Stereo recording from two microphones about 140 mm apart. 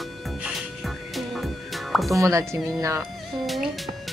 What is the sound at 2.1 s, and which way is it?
Speech, 20° right (ahead or behind).